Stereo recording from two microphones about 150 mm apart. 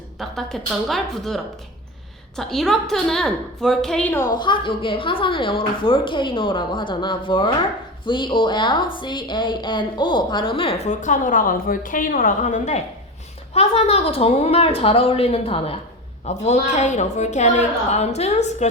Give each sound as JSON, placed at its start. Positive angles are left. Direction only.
{"t": 0.2, "sound": "a woman's voice", "side_deg": 0}
{"t": 4.4, "sound": "a woman's voice", "side_deg": 30}
{"t": 13.5, "sound": "a woman's voice", "side_deg": 45}